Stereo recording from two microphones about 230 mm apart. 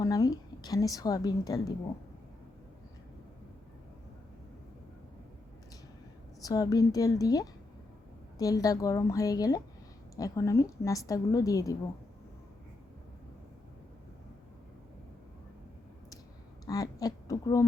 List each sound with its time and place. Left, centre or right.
0.0 s a woman's voice: centre
6.4 s a woman's voice: centre
16.6 s a woman's voice: centre